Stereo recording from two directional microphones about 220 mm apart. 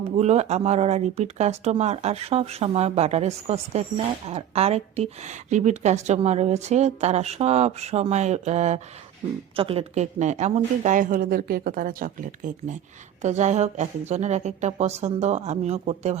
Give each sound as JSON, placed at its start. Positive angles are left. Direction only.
{"t": 0.2, "sound": "speech", "side_deg": -30}